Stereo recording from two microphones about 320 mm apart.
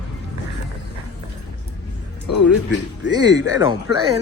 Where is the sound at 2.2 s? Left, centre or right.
Left.